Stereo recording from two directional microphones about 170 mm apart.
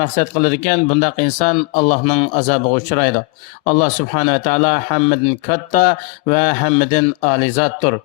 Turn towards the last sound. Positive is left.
turn(degrees=45)  # may be behind; listen again after turning